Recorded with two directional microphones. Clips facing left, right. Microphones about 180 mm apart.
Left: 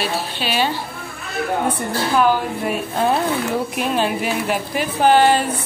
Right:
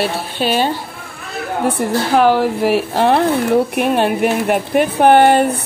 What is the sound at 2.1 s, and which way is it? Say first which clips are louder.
A woman's voice: right 4 dB; 75° right (ahead or behind).